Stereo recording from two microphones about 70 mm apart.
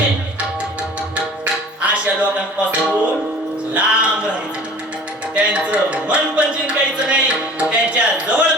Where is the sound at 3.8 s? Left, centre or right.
Centre.